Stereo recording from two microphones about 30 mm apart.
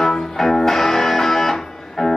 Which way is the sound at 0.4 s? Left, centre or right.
Centre.